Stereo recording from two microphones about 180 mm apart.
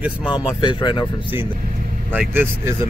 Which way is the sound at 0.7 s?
25° left (ahead or behind).